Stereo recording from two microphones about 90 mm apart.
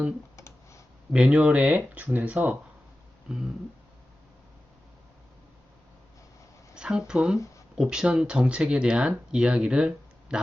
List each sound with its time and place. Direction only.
0.3 s clicking: 35° left (ahead or behind)
1.1 s speech: 10° right (ahead or behind)
3.2 s a sound: 5° right (ahead or behind)
6.7 s speech: 10° right (ahead or behind)